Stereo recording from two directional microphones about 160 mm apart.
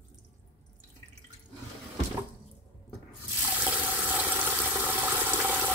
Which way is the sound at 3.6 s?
10° right (ahead or behind).